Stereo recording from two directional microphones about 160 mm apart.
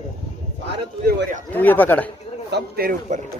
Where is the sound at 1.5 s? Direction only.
10° left (ahead or behind).